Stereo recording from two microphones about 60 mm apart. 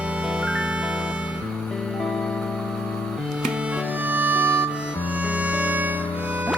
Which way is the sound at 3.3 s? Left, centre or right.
Centre.